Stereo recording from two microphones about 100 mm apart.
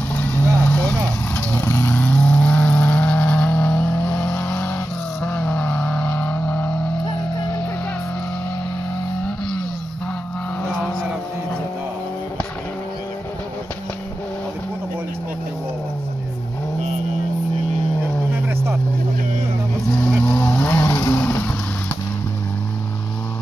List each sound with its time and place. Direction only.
0.1 s vehicle: 15° left (ahead or behind)
20.2 s vehicle: 20° left (ahead or behind)